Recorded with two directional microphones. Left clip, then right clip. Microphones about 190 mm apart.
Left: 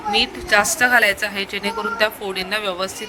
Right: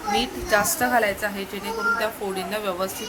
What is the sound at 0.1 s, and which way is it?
Speech, 35° left (ahead or behind).